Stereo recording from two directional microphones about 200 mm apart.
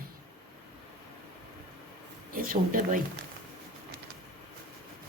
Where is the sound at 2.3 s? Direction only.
45° right (ahead or behind).